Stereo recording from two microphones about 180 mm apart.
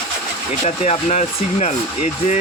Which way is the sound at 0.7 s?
35° left (ahead or behind).